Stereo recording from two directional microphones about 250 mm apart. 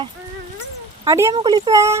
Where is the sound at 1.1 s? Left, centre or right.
Centre.